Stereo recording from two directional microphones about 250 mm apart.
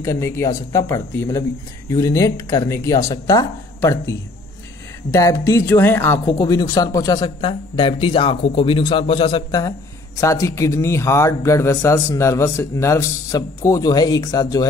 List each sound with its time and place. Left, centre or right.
0.0 s speech: centre